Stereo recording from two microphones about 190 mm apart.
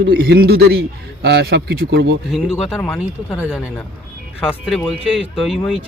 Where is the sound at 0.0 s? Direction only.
60° right (ahead or behind).